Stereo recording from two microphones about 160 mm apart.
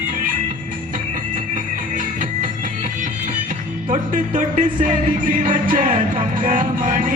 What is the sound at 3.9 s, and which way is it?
Music, 55° right (ahead or behind).